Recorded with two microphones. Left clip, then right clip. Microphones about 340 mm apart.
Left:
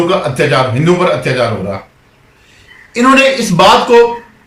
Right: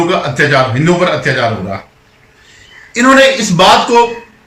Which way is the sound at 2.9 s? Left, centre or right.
Centre.